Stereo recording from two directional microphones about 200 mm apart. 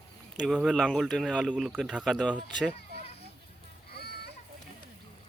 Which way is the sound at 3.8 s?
50° left (ahead or behind).